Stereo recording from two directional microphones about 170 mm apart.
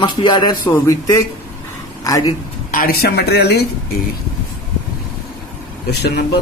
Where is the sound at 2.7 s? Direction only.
60° left (ahead or behind).